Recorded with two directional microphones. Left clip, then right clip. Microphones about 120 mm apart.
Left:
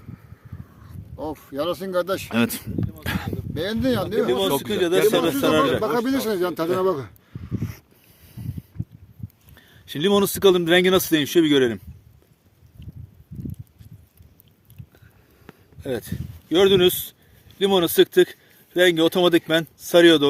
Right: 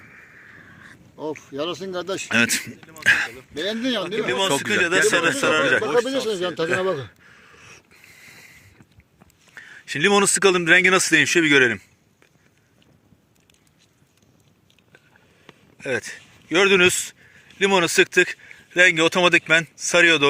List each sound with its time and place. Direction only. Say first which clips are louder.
1.2 s speech: left 1 dB; 35° left (ahead or behind)
2.3 s speech: right 5 dB; 25° left (ahead or behind); by 4.4 s 45° left (ahead or behind)
4.4 s speech: right 1 dB; 10° left (ahead or behind)
4.7 s speech: even; 45° left (ahead or behind)
5.8 s speech: right 2 dB; 85° left
6.7 s speech: left 1 dB; 40° left (ahead or behind)
9.6 s speech: right 5 dB; 50° left (ahead or behind)
15.8 s speech: right 3 dB; 45° left (ahead or behind); by 20.2 s 60° left (ahead or behind)